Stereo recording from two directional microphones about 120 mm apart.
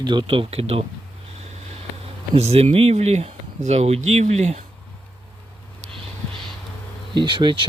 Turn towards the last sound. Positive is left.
turn(degrees=-40)  # may be behind; listen again after turning